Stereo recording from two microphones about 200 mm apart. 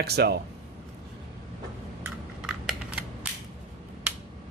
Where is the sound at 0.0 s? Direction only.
55° right (ahead or behind).